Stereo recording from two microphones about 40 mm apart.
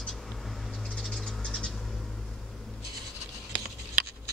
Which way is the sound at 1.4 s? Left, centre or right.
Centre.